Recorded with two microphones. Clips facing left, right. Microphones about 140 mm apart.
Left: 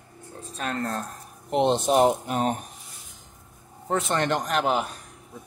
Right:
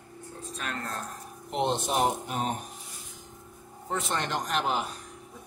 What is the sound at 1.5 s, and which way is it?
Speech, 80° left.